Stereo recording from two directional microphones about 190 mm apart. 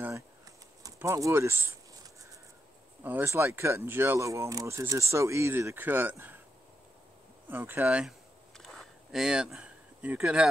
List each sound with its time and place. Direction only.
0.8 s speech: 15° right (ahead or behind)
3.0 s speech: 10° right (ahead or behind)
7.4 s speech: 10° right (ahead or behind)
8.5 s a sound: centre (ahead or behind)